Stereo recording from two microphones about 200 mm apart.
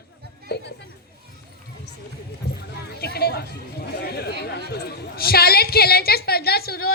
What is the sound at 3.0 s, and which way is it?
Chatter, 50° left (ahead or behind).